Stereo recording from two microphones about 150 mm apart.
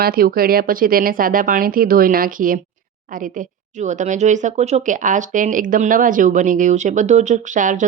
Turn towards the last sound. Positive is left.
turn(degrees=-60)  # may be behind; listen again after turning